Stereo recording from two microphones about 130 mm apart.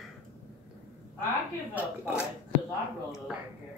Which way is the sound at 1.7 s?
15° right (ahead or behind).